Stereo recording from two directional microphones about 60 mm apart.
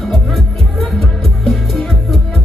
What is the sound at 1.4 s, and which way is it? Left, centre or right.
Music, centre.